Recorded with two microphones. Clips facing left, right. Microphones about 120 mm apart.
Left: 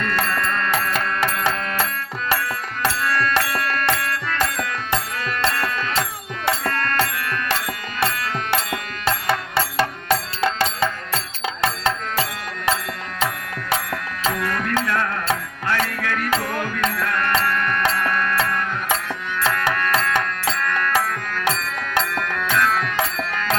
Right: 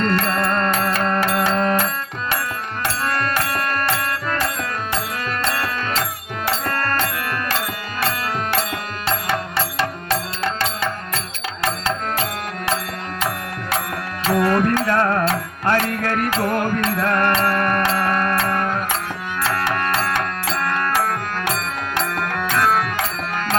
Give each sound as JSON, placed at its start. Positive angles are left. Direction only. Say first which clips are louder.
{"t": 0.0, "sound": "music", "louder": "right 4 dB", "side_deg": -35}
{"t": 3.0, "sound": "music", "louder": "even", "side_deg": -35}
{"t": 5.5, "sound": "music", "louder": "even", "side_deg": -35}
{"t": 14.3, "sound": "music", "louder": "right 10 dB", "side_deg": -40}